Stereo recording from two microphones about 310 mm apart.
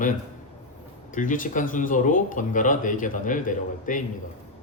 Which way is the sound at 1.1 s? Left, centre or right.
Left.